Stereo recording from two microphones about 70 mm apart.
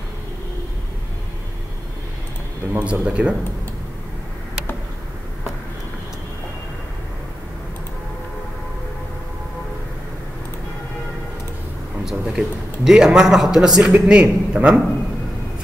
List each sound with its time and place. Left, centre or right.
2.8 s speech: centre
12.0 s speech: centre